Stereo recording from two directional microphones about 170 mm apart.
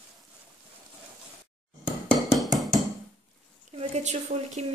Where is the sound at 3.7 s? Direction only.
40° right (ahead or behind).